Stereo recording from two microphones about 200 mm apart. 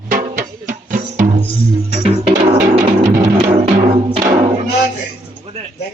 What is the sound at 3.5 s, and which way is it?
Music, 30° right (ahead or behind).